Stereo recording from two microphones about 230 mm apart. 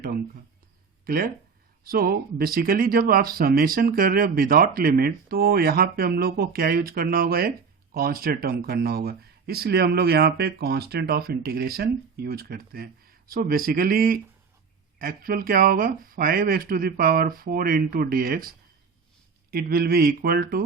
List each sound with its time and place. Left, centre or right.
1.0 s speech: right